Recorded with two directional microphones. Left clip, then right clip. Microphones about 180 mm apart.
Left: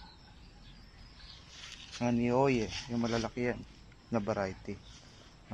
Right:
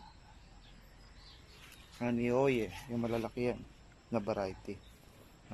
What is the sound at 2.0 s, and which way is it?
Speech, centre (ahead or behind).